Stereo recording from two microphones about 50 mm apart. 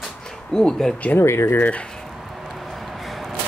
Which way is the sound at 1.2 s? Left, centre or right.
Left.